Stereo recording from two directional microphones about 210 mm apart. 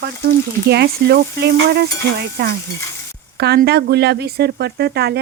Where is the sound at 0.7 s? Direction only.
50° right (ahead or behind).